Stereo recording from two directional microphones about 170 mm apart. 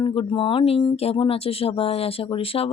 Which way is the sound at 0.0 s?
30° left (ahead or behind).